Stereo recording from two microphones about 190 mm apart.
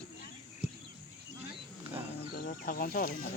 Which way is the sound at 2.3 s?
50° left (ahead or behind).